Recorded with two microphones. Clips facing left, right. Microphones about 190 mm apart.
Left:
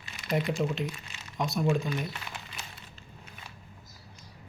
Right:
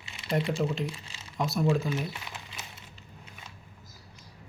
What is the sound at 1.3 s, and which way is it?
Speech, centre (ahead or behind).